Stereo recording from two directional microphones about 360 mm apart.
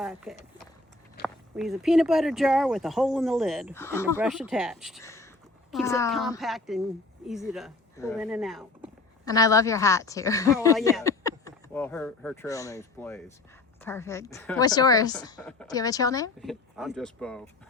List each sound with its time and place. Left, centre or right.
0.0 s a woman's voice: centre